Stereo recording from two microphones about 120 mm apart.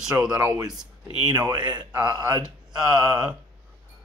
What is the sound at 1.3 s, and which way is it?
Speech, 35° right (ahead or behind).